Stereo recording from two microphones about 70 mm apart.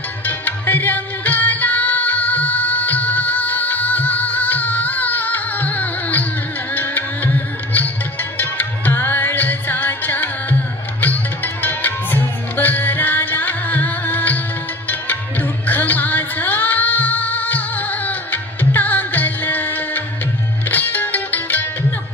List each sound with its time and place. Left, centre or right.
0.3 s music: left